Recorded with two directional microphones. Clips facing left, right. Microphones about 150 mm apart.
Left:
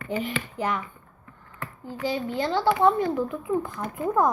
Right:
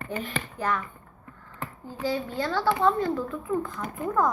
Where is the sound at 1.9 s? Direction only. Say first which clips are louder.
Left 1 dB; 20° left (ahead or behind).